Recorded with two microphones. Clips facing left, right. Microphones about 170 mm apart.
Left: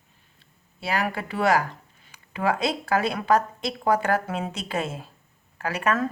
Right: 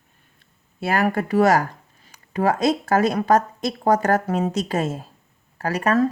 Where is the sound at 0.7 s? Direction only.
50° right (ahead or behind).